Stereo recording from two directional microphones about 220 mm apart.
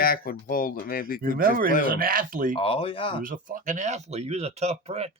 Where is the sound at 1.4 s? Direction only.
40° right (ahead or behind).